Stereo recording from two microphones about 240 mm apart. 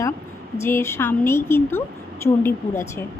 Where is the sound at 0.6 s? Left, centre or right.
Centre.